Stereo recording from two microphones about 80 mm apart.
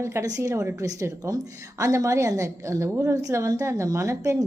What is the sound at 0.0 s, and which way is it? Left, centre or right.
A woman's voice, right.